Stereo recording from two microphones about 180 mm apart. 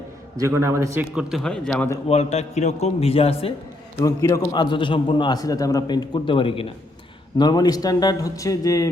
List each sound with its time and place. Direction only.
0.3 s a man's voice: 15° right (ahead or behind)
1.1 s speech: centre (ahead or behind)
1.7 s a man's voice: 15° left (ahead or behind)
2.0 s a man's voice: 35° left (ahead or behind)
4.0 s a man's voice: 20° left (ahead or behind)